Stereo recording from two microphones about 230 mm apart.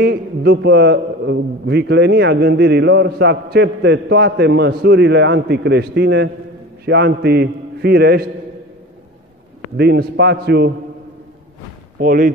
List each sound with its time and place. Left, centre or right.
0.0 s a man's voice: right
9.8 s a man's voice: right
12.0 s speech: right